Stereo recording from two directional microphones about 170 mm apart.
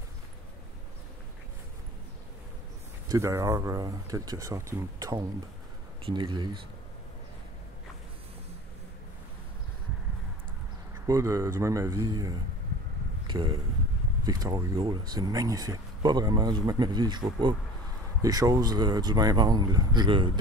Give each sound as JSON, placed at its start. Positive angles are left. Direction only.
{"t": 3.1, "sound": "speech", "side_deg": -20}
{"t": 11.1, "sound": "speech", "side_deg": -20}